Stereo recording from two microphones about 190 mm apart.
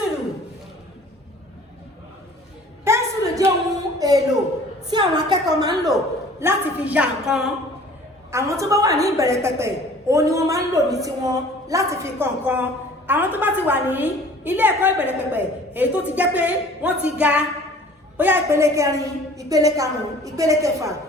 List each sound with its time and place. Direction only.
2.8 s a sound: 15° right (ahead or behind)
6.4 s a woman's voice: 10° right (ahead or behind)
8.3 s a woman's voice: 15° right (ahead or behind)